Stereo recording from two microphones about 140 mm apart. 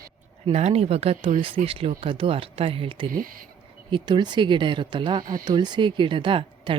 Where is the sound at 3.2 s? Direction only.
85° right.